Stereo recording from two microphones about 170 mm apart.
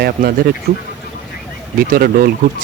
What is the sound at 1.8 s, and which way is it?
Speech, 60° right (ahead or behind).